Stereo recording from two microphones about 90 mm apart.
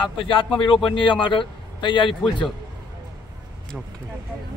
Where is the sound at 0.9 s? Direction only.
65° left (ahead or behind).